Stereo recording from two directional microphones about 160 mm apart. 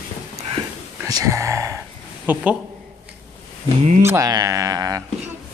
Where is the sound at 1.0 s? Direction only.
20° right (ahead or behind).